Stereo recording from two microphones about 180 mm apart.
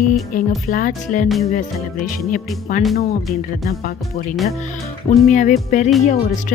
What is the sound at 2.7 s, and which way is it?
Speech, 45° left (ahead or behind).